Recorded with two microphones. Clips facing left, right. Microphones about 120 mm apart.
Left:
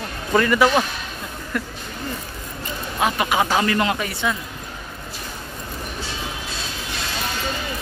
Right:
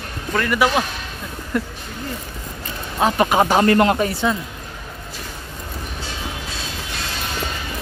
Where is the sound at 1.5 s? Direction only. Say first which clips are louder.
Right 4 dB; 25° right (ahead or behind).